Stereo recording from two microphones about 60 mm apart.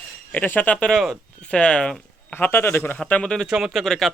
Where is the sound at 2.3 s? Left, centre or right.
Left.